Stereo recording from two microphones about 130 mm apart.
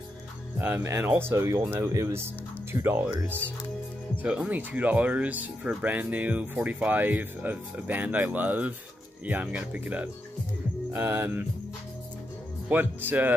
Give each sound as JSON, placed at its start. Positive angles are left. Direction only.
{"t": 0.6, "sound": "speech", "side_deg": -15}
{"t": 4.2, "sound": "speech", "side_deg": -10}
{"t": 12.6, "sound": "speech", "side_deg": -15}